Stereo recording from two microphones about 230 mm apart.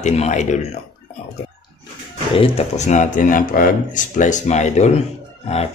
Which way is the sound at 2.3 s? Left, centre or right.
Left.